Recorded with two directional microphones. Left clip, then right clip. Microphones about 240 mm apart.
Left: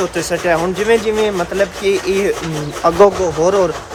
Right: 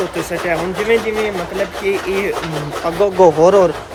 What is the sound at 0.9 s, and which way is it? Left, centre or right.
Speech, centre.